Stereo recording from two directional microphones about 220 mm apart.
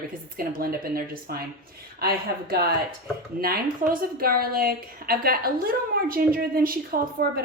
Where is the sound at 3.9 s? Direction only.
40° right (ahead or behind).